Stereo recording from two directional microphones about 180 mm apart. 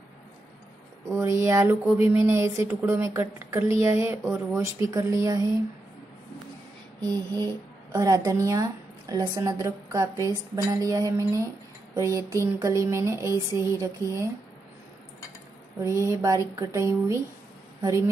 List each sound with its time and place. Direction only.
1.1 s a woman's voice: 15° right (ahead or behind)
7.9 s a woman's voice: 20° right (ahead or behind)
15.8 s a woman's voice: 15° right (ahead or behind)